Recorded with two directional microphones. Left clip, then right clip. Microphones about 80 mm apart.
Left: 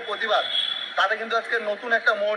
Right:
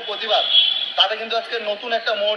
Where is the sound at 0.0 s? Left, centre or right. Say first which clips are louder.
Right 3 dB; centre.